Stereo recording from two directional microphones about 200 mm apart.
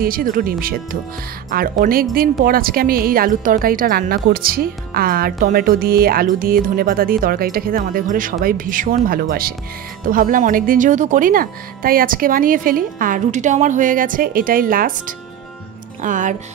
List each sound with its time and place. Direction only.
0.0 s a woman's voice: 45° right (ahead or behind)